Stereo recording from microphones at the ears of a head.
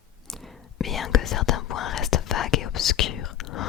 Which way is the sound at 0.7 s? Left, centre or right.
Left.